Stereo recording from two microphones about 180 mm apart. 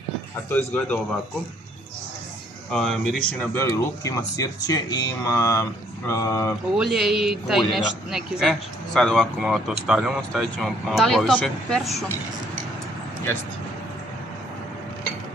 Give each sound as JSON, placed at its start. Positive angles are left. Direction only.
{"t": 0.5, "sound": "speech", "side_deg": 10}
{"t": 2.7, "sound": "a man's voice", "side_deg": 5}
{"t": 6.8, "sound": "a man's voice", "side_deg": 0}